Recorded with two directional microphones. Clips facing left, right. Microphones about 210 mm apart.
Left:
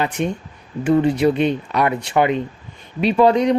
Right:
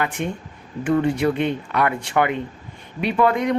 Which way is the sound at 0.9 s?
20° left (ahead or behind).